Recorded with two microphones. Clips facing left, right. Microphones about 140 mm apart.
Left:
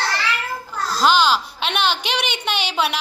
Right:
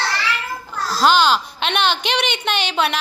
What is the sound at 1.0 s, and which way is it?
A woman's voice, 5° left (ahead or behind).